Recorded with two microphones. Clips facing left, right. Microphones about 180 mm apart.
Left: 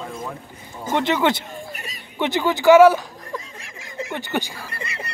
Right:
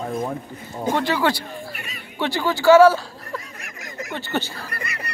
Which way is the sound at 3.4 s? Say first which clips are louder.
Right 2 dB; 30° left (ahead or behind).